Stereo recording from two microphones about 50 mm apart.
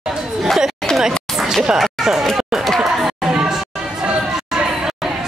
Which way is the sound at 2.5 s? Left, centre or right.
Centre.